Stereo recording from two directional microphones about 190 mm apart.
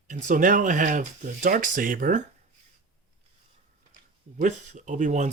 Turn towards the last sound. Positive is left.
turn(degrees=-40)  # may be behind; listen again after turning